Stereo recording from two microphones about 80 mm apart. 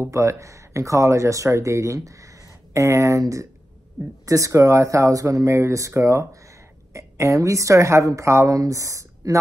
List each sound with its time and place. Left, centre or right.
0.0 s a woman's voice: right